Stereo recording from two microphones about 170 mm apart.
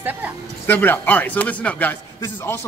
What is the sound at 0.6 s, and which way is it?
Speech, 10° left (ahead or behind).